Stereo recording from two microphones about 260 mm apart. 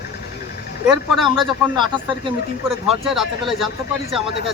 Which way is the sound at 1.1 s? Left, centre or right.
Centre.